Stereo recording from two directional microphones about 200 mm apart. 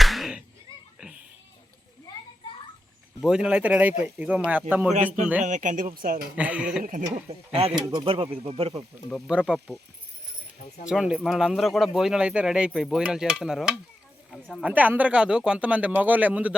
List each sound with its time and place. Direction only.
0.0 s a sound: centre (ahead or behind)
3.2 s stir: 5° right (ahead or behind)
4.7 s speech: 5° right (ahead or behind)
5.4 s speech: 40° right (ahead or behind)
6.3 s stir: 5° right (ahead or behind)
7.3 s speech: 30° right (ahead or behind)
9.0 s stir: centre (ahead or behind)
10.8 s stir: 5° right (ahead or behind)
14.3 s speech: 5° left (ahead or behind)
14.7 s speech: 10° right (ahead or behind)